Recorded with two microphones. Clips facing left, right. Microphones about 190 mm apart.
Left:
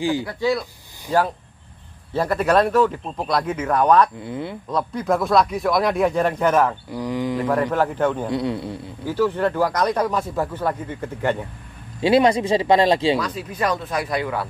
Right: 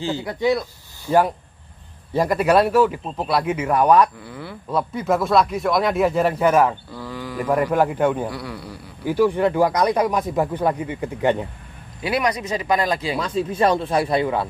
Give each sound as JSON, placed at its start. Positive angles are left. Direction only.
{"t": 0.2, "sound": "speech", "side_deg": -20}
{"t": 2.1, "sound": "speech", "side_deg": -10}
{"t": 4.2, "sound": "speech", "side_deg": 20}
{"t": 4.6, "sound": "speech", "side_deg": -5}
{"t": 6.9, "sound": "speech", "side_deg": 15}
{"t": 7.4, "sound": "speech", "side_deg": -10}
{"t": 8.3, "sound": "speech", "side_deg": 25}
{"t": 9.0, "sound": "speech", "side_deg": -15}
{"t": 12.0, "sound": "speech", "side_deg": 25}
{"t": 13.2, "sound": "speech", "side_deg": -25}